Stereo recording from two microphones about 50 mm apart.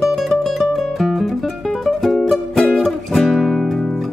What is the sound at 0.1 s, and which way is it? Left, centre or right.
Music, centre.